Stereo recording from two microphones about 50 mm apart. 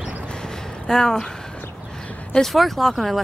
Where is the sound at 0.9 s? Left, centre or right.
Centre.